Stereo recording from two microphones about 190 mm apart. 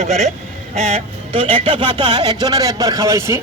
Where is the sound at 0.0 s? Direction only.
35° right (ahead or behind).